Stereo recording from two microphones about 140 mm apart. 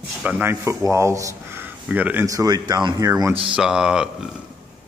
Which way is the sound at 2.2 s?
25° right (ahead or behind).